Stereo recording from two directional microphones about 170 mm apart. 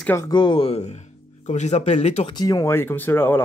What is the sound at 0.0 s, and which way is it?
Speech, 15° left (ahead or behind).